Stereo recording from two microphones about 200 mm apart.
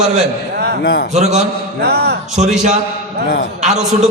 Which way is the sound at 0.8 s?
55° left (ahead or behind).